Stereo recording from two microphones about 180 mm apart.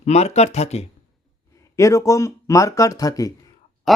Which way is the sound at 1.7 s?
15° left (ahead or behind).